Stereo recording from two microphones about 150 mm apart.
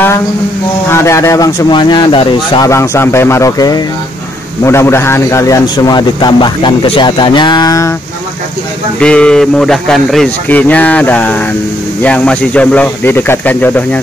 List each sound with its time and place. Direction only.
0.8 s a man's voice: 20° left (ahead or behind)
2.7 s a man's voice: 20° left (ahead or behind)
9.0 s speech: 5° left (ahead or behind)